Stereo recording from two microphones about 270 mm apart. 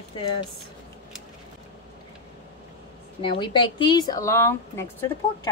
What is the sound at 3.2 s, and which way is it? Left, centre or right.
A woman's voice, centre.